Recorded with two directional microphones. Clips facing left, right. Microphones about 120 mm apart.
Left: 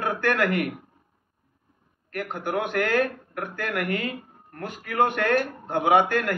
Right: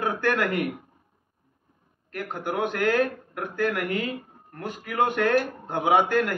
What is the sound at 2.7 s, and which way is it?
A man's voice, 25° right (ahead or behind).